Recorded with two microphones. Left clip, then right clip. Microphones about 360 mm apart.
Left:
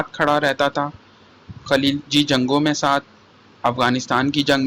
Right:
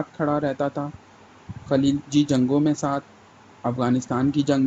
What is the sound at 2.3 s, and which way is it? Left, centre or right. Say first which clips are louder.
Speech: left 3 dB; left.